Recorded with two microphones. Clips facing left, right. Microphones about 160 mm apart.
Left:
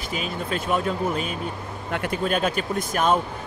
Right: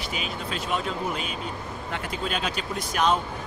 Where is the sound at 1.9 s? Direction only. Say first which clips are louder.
Left 7 dB; 55° left (ahead or behind).